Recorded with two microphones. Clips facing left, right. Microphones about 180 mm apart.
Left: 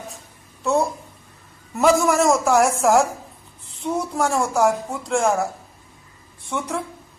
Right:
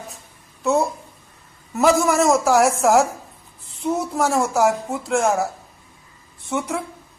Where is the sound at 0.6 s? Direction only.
Centre (ahead or behind).